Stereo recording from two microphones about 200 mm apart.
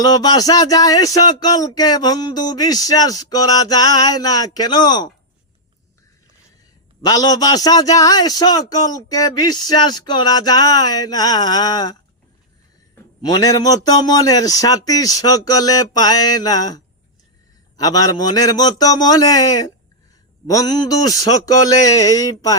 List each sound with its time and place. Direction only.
0.0 s speech: 20° left (ahead or behind)
7.0 s speech: 20° left (ahead or behind)
13.2 s a man's voice: 20° left (ahead or behind)